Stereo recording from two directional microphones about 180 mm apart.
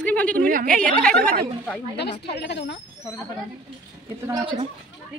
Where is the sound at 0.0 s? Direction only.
10° left (ahead or behind).